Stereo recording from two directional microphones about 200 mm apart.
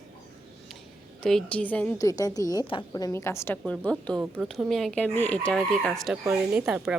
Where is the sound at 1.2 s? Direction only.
5° left (ahead or behind).